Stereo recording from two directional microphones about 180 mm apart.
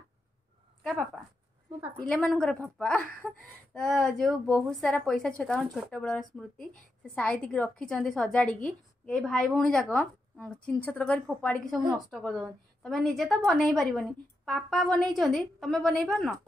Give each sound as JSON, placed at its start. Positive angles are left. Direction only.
{"t": 0.8, "sound": "a woman's voice", "side_deg": 5}